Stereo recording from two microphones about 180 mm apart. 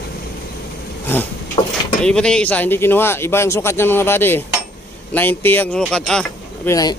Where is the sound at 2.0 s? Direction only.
5° left (ahead or behind).